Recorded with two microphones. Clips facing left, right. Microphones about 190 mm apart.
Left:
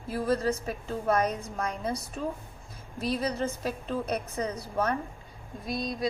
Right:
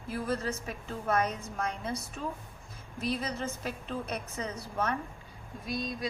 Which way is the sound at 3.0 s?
35° left (ahead or behind).